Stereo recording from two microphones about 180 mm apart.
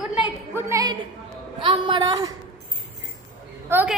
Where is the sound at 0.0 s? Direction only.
10° right (ahead or behind).